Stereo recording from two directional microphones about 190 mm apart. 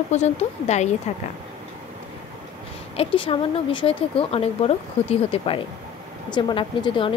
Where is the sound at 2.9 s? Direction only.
30° left (ahead or behind).